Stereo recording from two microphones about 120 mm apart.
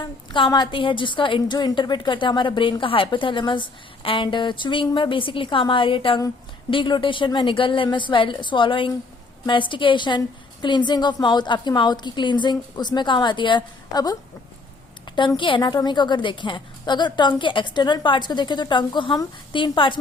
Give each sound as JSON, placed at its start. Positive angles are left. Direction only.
{"t": 0.0, "sound": "a woman's voice", "side_deg": 40}